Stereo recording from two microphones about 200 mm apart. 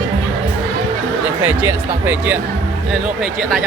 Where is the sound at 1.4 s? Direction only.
10° right (ahead or behind).